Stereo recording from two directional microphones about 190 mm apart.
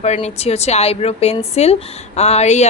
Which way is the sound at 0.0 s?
35° left (ahead or behind).